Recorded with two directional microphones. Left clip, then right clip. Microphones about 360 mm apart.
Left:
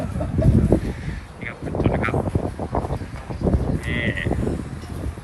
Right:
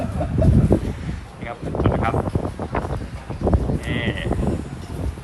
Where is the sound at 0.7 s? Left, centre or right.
Centre.